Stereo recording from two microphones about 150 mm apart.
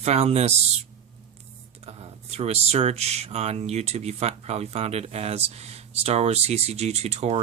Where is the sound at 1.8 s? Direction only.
40° right (ahead or behind).